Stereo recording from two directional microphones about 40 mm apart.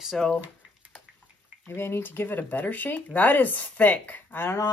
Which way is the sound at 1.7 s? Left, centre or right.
Left.